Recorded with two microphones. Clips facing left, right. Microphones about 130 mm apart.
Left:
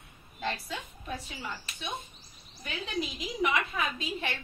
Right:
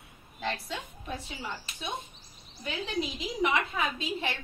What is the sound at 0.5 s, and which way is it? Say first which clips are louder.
Speech: right 1 dB; centre (ahead or behind).